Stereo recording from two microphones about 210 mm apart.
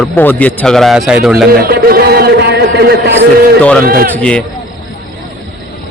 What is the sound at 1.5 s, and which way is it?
A man's voice, 45° right (ahead or behind).